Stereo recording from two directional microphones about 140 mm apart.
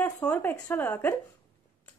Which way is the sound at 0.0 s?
10° left (ahead or behind).